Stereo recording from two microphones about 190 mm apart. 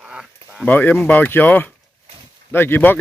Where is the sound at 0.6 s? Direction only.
10° left (ahead or behind).